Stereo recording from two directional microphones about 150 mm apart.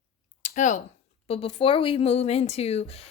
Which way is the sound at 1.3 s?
40° left (ahead or behind).